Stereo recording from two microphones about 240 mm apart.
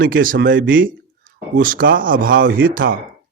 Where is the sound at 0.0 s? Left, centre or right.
Right.